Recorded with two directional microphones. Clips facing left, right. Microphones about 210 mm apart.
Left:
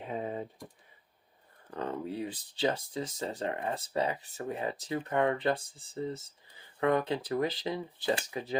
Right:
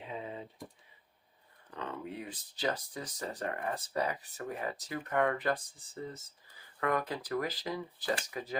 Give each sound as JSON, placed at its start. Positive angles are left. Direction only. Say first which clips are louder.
{"t": 0.0, "sound": "typing", "louder": "left 6 dB", "side_deg": 50}
{"t": 1.7, "sound": "speech", "louder": "left 5 dB", "side_deg": 40}